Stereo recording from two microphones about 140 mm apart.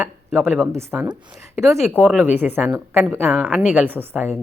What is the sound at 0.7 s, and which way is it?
A woman's voice, 20° right (ahead or behind).